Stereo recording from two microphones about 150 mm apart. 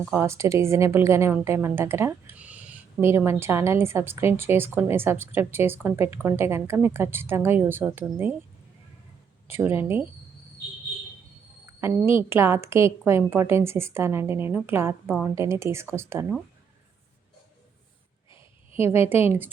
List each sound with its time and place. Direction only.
0.1 s a woman's voice: 20° right (ahead or behind)
9.5 s a woman's voice: 15° right (ahead or behind)
11.8 s a woman's voice: 15° right (ahead or behind)
18.3 s a sound: 40° left (ahead or behind)